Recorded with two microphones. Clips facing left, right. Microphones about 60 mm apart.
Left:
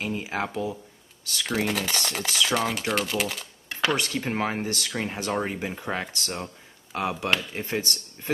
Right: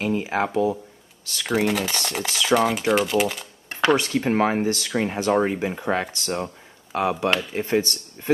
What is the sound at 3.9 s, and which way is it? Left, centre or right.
Speech, centre.